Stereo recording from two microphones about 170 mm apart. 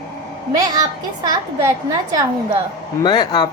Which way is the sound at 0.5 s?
20° right (ahead or behind).